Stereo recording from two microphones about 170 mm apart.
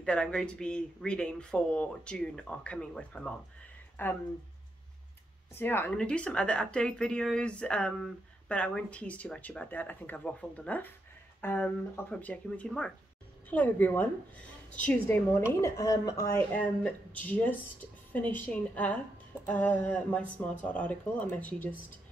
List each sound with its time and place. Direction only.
0.0 s speech: 5° left (ahead or behind)
3.9 s a sound: 10° left (ahead or behind)
5.5 s a woman's voice: 15° left (ahead or behind)